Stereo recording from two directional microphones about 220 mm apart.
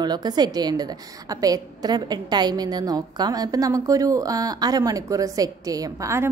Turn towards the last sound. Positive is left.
turn(degrees=-15)  # may be behind; listen again after turning